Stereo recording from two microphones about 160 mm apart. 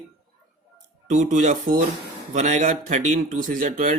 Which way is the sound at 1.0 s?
50° right (ahead or behind).